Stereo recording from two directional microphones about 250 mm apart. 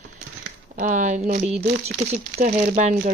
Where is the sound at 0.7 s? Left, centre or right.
Right.